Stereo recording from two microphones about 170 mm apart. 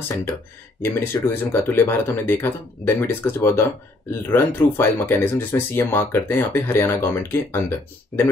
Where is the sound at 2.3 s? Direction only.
15° left (ahead or behind).